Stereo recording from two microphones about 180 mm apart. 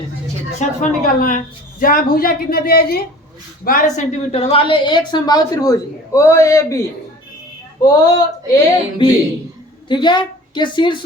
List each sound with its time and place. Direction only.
0.6 s a woman's voice: 45° left (ahead or behind); by 6.7 s 15° left (ahead or behind)
7.8 s a woman's voice: 20° left (ahead or behind)